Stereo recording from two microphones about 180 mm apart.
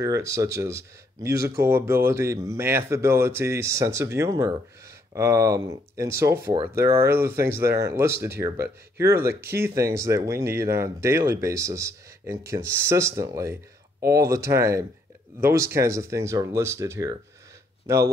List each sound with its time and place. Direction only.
0.0 s speech: 15° right (ahead or behind)